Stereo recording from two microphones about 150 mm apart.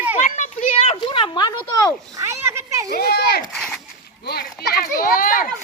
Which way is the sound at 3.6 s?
5° left (ahead or behind).